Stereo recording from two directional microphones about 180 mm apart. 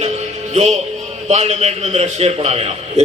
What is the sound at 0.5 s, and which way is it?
A man's voice, 40° right (ahead or behind).